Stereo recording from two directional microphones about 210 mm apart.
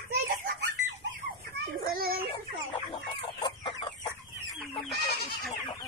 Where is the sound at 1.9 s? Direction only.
45° right (ahead or behind).